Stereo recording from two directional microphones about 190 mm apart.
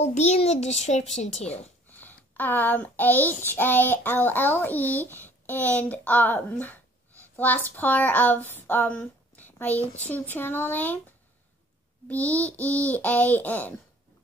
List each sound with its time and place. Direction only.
0.0 s a child's voice: 35° left (ahead or behind)
1.9 s a child's voice: 10° left (ahead or behind)
12.1 s a child's voice: 10° left (ahead or behind)